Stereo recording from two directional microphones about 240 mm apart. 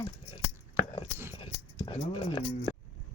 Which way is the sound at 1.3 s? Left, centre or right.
Left.